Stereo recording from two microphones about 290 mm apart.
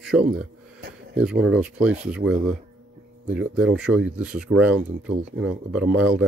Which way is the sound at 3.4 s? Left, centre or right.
Right.